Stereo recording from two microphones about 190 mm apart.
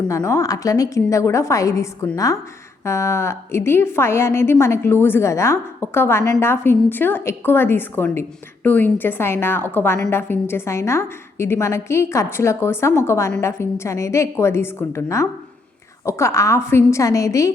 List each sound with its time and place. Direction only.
0.1 s a woman's voice: 15° left (ahead or behind)